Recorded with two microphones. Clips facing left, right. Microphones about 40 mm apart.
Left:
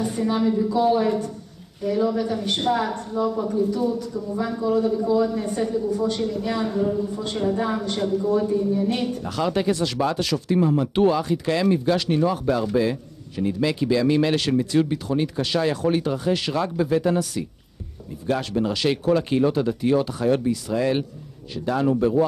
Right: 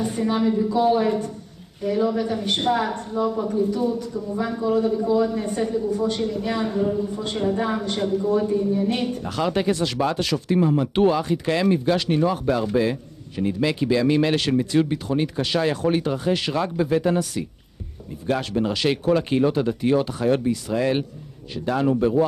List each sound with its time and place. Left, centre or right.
0.0 s speech: right